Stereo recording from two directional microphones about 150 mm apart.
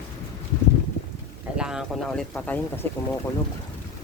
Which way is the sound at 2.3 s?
10° left (ahead or behind).